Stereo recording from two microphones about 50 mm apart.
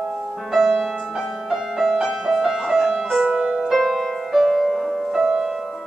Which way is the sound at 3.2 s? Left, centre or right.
Centre.